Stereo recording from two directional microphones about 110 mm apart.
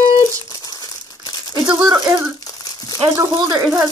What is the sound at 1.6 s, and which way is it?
Speech, 35° right (ahead or behind).